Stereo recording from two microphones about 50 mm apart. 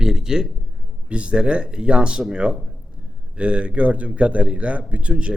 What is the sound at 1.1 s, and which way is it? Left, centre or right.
A man's voice, right.